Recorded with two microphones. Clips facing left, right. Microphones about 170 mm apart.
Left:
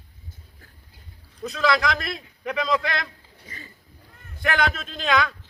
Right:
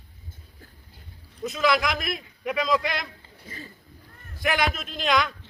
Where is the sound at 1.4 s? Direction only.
5° right (ahead or behind).